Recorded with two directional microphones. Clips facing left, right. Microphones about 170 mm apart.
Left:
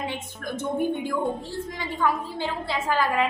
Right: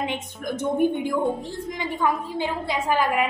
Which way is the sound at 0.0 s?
20° right (ahead or behind).